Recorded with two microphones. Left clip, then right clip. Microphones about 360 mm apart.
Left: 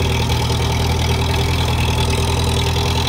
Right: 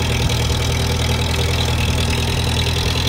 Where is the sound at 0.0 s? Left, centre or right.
Centre.